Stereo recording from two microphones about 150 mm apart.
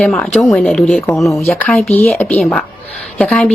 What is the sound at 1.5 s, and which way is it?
A woman's voice, 10° left (ahead or behind).